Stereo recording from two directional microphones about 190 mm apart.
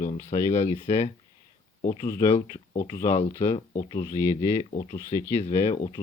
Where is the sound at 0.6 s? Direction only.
35° left (ahead or behind).